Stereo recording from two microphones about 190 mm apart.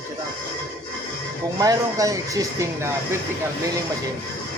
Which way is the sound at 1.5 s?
20° right (ahead or behind).